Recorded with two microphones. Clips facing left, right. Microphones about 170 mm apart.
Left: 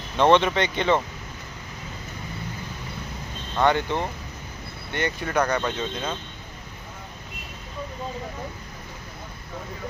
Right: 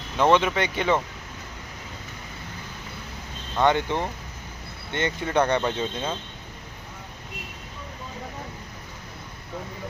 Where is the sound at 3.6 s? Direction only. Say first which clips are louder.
Even; 15° right (ahead or behind).